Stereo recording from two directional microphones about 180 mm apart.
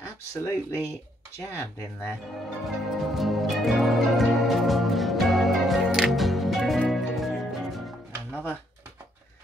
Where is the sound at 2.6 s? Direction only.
Centre (ahead or behind).